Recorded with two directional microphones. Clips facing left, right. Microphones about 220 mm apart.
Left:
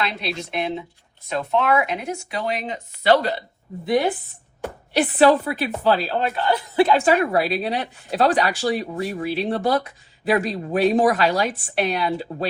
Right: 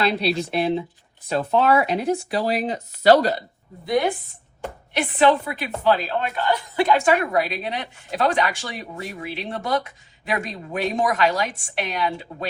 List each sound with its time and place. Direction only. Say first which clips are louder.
0.5 s speech: right 4 dB; 35° right (ahead or behind)
4.9 s a woman's voice: left 3 dB; 35° left (ahead or behind)